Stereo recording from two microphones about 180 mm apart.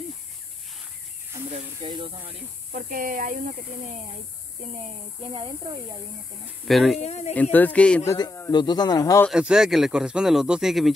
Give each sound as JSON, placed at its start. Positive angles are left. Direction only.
{"t": 1.8, "sound": "speech", "side_deg": -25}
{"t": 2.7, "sound": "speech", "side_deg": -50}
{"t": 5.3, "sound": "speech", "side_deg": -25}
{"t": 6.7, "sound": "speech", "side_deg": 0}
{"t": 7.0, "sound": "speech", "side_deg": 35}
{"t": 7.5, "sound": "speech", "side_deg": 10}
{"t": 8.1, "sound": "a man's voice", "side_deg": 20}
{"t": 9.3, "sound": "speech", "side_deg": -5}